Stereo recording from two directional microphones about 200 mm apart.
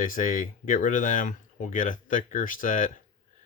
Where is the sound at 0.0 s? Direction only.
40° left (ahead or behind).